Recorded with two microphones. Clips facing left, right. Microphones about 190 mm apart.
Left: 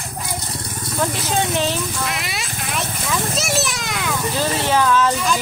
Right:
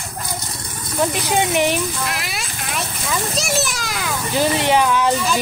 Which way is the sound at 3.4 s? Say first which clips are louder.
Even; centre (ahead or behind).